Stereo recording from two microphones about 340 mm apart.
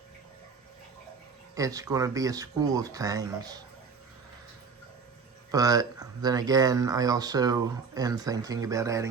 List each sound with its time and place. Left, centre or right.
1.5 s speech: centre
5.5 s speech: centre